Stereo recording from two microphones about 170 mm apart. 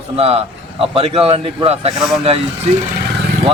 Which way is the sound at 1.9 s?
Centre (ahead or behind).